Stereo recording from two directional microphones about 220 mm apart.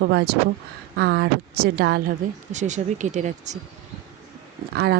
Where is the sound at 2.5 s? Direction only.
35° right (ahead or behind).